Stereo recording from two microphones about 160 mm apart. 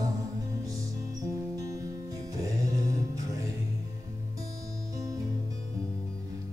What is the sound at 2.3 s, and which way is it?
Music, 20° right (ahead or behind).